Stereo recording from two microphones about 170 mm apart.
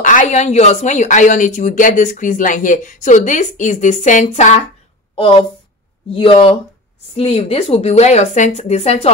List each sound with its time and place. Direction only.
0.0 s a woman's voice: 50° left (ahead or behind)
5.1 s a woman's voice: 30° left (ahead or behind)